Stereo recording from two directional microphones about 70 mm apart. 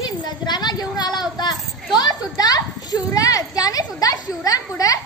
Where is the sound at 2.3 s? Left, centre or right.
Left.